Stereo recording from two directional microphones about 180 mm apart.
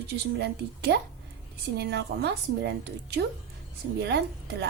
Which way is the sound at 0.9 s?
75° right (ahead or behind).